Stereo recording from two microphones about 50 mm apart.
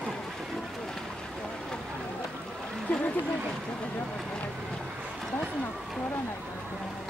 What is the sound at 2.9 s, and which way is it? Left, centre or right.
Speech, left.